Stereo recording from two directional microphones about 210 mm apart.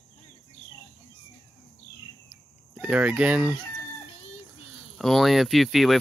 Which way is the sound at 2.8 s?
5° right (ahead or behind).